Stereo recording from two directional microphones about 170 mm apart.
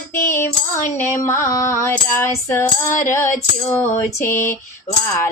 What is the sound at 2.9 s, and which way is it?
Music, 50° left (ahead or behind).